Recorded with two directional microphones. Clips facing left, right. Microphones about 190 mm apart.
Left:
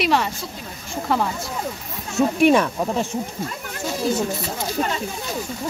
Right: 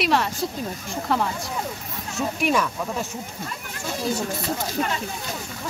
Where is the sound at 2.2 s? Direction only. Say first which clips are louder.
Left 7 dB; 50° left (ahead or behind); by 3.1 s 35° left (ahead or behind).